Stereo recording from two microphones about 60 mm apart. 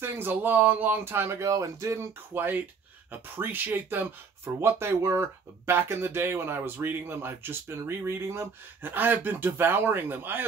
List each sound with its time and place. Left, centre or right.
0.0 s speech: right
2.3 s speech: right
4.6 s speech: right
8.8 s speech: right